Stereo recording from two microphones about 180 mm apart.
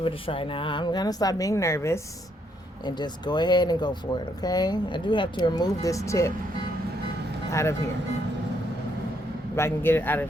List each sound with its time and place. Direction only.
0.0 s speech: 30° left (ahead or behind)
7.5 s a man's voice: 15° left (ahead or behind)
9.6 s a man's voice: 15° left (ahead or behind)